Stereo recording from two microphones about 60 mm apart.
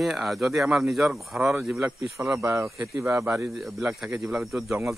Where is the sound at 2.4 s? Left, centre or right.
Right.